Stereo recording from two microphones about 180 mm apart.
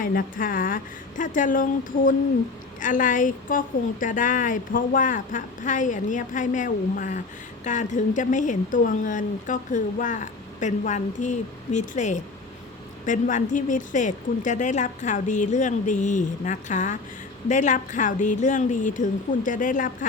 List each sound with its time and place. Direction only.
0.0 s a woman's voice: 50° left (ahead or behind)